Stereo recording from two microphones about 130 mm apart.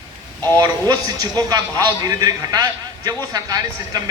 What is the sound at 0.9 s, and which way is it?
A man's voice, 30° right (ahead or behind).